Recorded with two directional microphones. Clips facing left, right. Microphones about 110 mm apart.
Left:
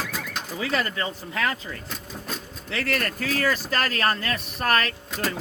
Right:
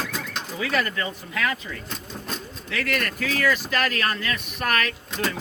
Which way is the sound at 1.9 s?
5° left (ahead or behind).